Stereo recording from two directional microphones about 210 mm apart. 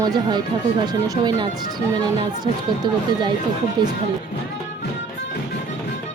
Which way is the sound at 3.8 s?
20° right (ahead or behind).